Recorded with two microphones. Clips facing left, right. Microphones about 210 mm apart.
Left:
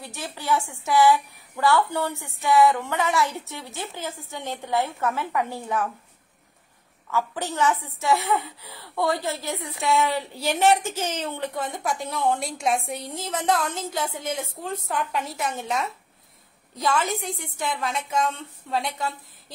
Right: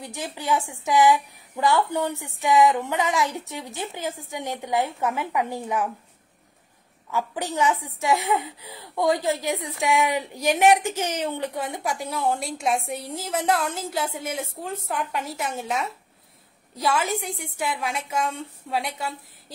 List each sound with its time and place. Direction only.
0.0 s a woman's voice: 15° right (ahead or behind)
7.1 s a woman's voice: 15° right (ahead or behind)